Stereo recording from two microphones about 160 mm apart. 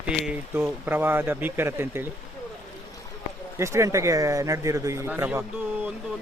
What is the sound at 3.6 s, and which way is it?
A man's voice, 20° right (ahead or behind).